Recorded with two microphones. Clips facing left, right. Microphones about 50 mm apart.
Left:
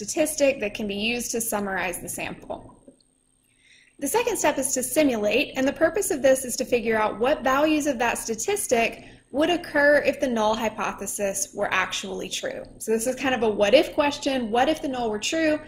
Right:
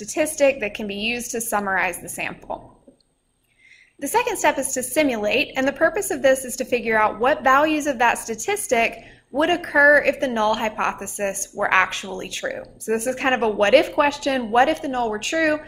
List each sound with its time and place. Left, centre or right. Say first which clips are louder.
0.0 s a woman's voice: right 3 dB; right
0.8 s a woman's voice: right 1 dB; right
1.1 s a woman's voice: right 3 dB; right
4.0 s a woman's voice: right 3 dB; right